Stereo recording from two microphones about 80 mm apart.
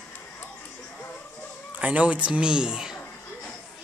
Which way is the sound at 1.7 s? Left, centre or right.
Centre.